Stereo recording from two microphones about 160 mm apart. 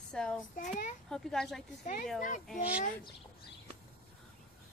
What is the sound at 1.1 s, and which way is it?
Speech, 5° left (ahead or behind).